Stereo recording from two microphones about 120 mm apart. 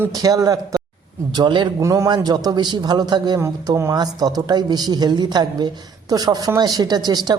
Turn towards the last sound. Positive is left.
turn(degrees=-35)  # may be behind; listen again after turning